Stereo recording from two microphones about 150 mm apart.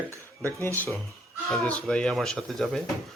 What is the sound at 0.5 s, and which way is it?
A man's voice, 15° left (ahead or behind).